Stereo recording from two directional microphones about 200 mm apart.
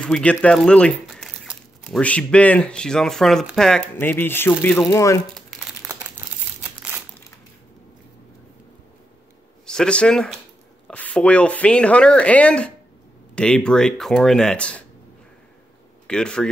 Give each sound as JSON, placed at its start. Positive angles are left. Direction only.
{"t": 0.0, "sound": "speech", "side_deg": 5}
{"t": 9.7, "sound": "speech", "side_deg": 5}
{"t": 16.1, "sound": "speech", "side_deg": 5}